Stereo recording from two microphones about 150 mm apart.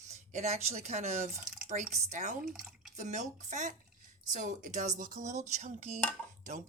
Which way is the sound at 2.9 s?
55° right (ahead or behind).